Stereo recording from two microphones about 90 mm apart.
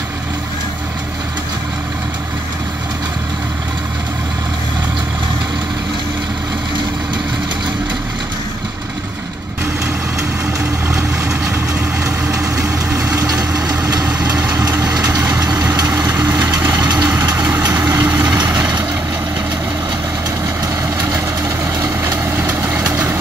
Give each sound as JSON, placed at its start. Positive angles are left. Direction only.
{"t": 10.9, "sound": "vehicle", "side_deg": -35}
{"t": 12.5, "sound": "vehicle", "side_deg": -35}
{"t": 14.0, "sound": "vehicle", "side_deg": -15}
{"t": 14.6, "sound": "vehicle", "side_deg": -40}
{"t": 16.0, "sound": "vehicle", "side_deg": -40}
{"t": 16.3, "sound": "vehicle", "side_deg": -20}
{"t": 16.7, "sound": "vehicle", "side_deg": -45}
{"t": 17.0, "sound": "vehicle", "side_deg": -15}
{"t": 21.8, "sound": "vehicle", "side_deg": -25}